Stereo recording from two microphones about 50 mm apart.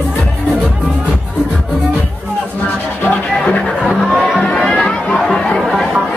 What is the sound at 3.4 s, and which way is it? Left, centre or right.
Music, left.